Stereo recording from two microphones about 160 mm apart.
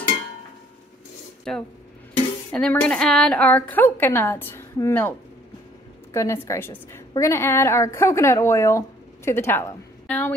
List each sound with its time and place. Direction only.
1.5 s a woman's voice: 5° left (ahead or behind)
6.1 s a woman's voice: 15° left (ahead or behind)